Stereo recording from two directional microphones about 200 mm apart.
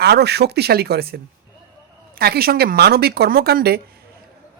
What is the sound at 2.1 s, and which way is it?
A man's voice, 50° right (ahead or behind).